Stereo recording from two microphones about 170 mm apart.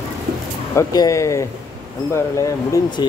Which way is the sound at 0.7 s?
20° left (ahead or behind).